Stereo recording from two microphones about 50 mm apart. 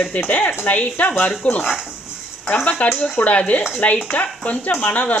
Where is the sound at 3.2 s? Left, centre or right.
Left.